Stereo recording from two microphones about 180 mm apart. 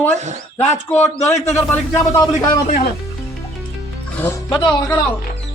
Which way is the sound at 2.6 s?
55° left (ahead or behind).